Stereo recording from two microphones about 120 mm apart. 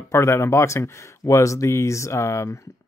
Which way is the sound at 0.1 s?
25° left (ahead or behind).